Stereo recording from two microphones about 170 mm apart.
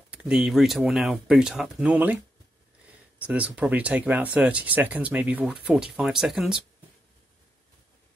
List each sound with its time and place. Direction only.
0.1 s speech: 5° right (ahead or behind)
3.3 s speech: 5° right (ahead or behind)